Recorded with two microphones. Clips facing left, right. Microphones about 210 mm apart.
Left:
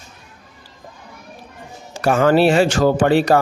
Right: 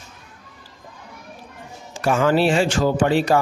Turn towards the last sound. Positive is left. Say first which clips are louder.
# left 3 dB
turn(degrees=60)  # may be behind; listen again after turning